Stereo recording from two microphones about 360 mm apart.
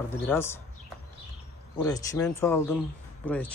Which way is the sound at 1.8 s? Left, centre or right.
Centre.